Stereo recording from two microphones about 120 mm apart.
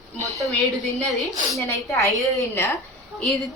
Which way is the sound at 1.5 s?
25° left (ahead or behind).